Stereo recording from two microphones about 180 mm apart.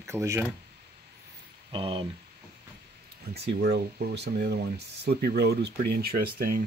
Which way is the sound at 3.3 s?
65° right (ahead or behind).